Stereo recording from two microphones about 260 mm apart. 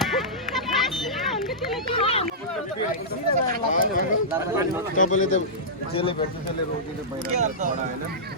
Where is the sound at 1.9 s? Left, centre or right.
Left.